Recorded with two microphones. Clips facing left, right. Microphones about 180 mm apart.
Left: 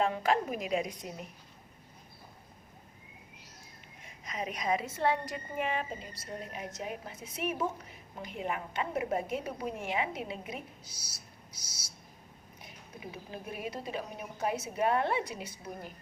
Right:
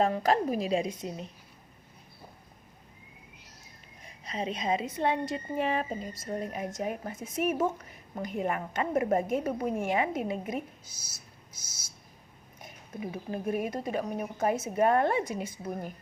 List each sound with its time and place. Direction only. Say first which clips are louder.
0.0 s a woman's voice: right 3 dB; 40° right (ahead or behind)
4.0 s a woman's voice: right 4 dB; 30° right (ahead or behind); by 15.9 s 50° right (ahead or behind)